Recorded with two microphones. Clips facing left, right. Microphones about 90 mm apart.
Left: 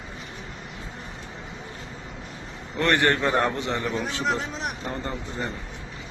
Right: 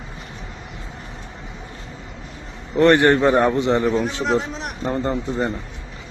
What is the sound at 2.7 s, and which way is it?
A man's voice, 25° right (ahead or behind).